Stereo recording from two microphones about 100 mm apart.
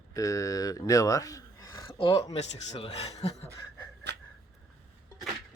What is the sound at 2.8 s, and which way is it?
Speech, 90° left.